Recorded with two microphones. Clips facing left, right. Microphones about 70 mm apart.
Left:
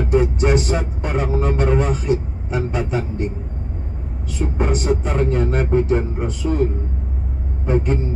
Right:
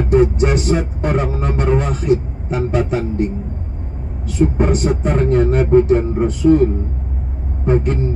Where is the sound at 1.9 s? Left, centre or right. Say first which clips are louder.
Right 4 dB; right.